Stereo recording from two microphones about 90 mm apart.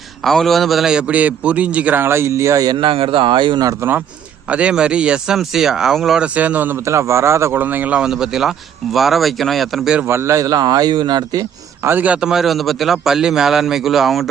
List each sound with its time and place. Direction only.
0.3 s speech: centre (ahead or behind); by 2.0 s 15° right (ahead or behind)
2.0 s speech: 30° right (ahead or behind)
2.7 s speech: 90° right; by 3.6 s 65° right (ahead or behind)
3.8 s a man's voice: 25° right (ahead or behind)
4.4 s speech: 15° right (ahead or behind)
6.8 s speech: 30° right (ahead or behind)
7.6 s speech: 20° right (ahead or behind)
10.1 s speech: 30° right (ahead or behind); by 11.4 s 45° right (ahead or behind)
11.8 s speech: 25° right (ahead or behind); by 14.3 s centre (ahead or behind)